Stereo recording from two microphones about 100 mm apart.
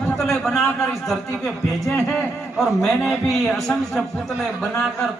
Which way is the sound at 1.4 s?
25° left (ahead or behind).